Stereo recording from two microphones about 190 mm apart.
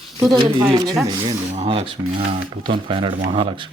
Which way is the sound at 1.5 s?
30° right (ahead or behind).